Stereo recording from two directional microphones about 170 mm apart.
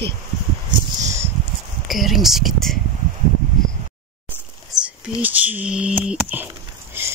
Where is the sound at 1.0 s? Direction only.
20° right (ahead or behind).